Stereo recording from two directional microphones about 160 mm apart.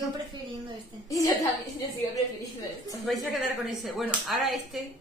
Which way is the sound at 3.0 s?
Centre (ahead or behind).